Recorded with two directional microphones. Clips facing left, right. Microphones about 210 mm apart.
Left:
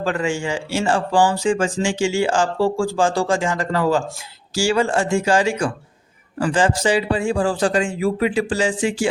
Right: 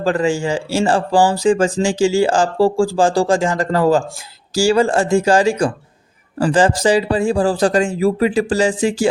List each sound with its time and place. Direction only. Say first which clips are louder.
0.0 s speech: right 5 dB; 35° right (ahead or behind)